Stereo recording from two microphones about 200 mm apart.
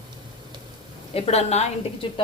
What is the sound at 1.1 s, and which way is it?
Speech, 30° left (ahead or behind).